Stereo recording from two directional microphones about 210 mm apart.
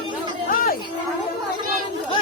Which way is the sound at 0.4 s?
40° left (ahead or behind).